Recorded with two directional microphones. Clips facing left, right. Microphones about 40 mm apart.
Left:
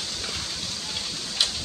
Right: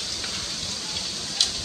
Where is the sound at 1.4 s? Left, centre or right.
Centre.